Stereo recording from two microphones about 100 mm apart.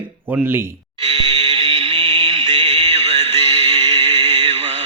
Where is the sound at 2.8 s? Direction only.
90° right.